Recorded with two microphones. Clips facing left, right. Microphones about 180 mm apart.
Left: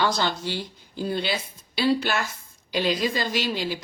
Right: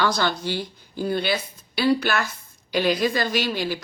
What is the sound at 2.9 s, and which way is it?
Speech, 60° right (ahead or behind).